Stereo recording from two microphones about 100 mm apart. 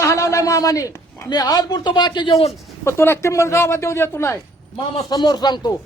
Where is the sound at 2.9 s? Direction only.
25° left (ahead or behind).